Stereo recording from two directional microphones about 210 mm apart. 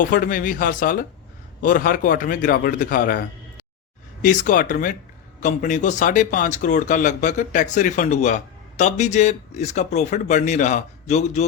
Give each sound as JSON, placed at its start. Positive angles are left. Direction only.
{"t": 0.0, "sound": "speech", "side_deg": 40}
{"t": 4.2, "sound": "speech", "side_deg": 40}